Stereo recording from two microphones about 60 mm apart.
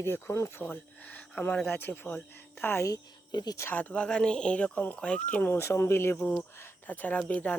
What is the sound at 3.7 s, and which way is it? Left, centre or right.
Speech, left.